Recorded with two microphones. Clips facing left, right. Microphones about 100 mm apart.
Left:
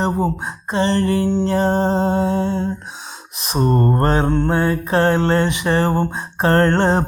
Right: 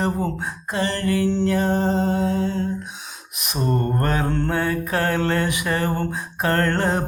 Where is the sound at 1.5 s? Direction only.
30° left (ahead or behind).